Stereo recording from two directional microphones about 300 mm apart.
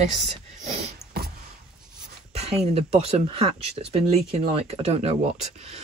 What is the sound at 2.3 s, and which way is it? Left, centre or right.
Speech, right.